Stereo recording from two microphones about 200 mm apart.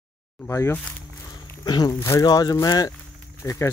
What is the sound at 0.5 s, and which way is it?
Speech, 15° left (ahead or behind).